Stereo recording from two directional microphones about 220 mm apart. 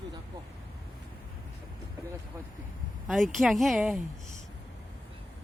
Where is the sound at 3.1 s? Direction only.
Centre (ahead or behind).